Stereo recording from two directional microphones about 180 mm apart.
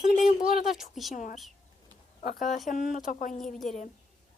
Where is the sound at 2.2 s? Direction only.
45° left (ahead or behind).